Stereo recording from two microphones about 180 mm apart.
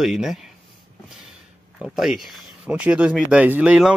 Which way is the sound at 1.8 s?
Centre (ahead or behind).